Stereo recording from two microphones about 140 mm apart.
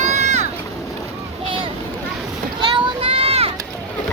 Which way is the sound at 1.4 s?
35° right (ahead or behind).